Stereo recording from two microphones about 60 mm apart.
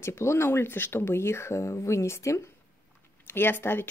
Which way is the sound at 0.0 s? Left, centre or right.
Left.